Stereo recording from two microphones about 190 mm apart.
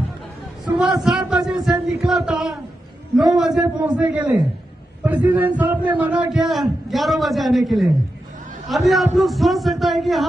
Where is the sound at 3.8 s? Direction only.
5° right (ahead or behind).